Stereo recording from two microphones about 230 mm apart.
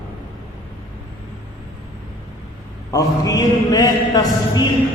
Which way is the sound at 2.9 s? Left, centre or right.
Centre.